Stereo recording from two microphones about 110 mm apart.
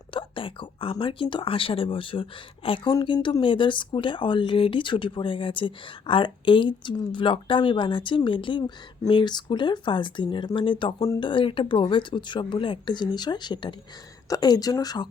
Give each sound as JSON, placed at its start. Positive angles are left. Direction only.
{"t": 0.1, "sound": "speech", "side_deg": 50}